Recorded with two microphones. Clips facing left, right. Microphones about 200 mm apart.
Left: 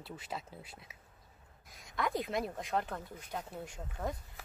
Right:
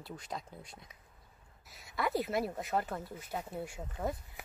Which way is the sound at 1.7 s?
5° right (ahead or behind).